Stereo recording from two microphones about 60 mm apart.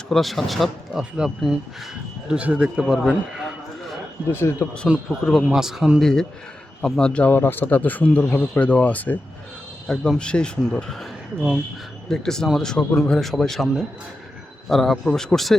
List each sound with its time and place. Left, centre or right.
0.1 s a man's voice: centre
2.3 s a man's voice: right; by 3.5 s centre
4.3 s speech: left
4.6 s speech: centre
5.0 s a man's voice: centre
5.5 s a man's voice: centre
6.0 s speech: centre
7.3 s speech: left
9.8 s speech: centre
11.3 s a man's voice: centre
12.0 s a man's voice: centre
14.7 s a man's voice: centre